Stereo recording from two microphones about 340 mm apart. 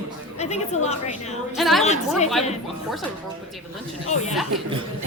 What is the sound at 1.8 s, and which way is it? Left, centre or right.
Speech, centre.